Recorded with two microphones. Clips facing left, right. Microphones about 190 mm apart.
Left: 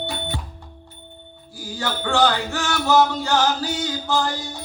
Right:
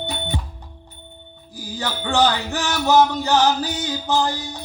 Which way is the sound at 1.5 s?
20° right (ahead or behind).